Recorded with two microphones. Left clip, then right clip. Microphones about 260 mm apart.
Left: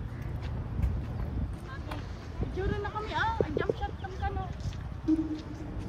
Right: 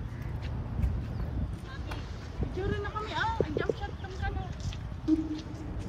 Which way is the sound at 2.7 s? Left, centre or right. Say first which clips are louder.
Even; left.